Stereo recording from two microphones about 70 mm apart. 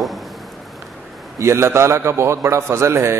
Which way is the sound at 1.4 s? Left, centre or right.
Right.